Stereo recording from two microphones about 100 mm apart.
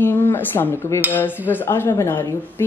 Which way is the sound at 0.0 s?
25° left (ahead or behind).